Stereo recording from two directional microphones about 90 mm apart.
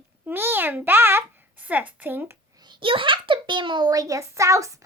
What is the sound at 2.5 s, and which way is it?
A child's voice, 55° right (ahead or behind).